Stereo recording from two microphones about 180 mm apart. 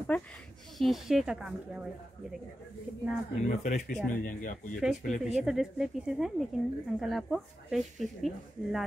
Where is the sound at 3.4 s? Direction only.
40° left (ahead or behind).